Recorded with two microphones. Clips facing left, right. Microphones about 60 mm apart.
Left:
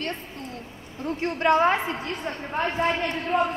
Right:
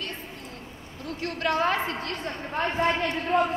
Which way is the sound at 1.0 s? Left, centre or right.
Left.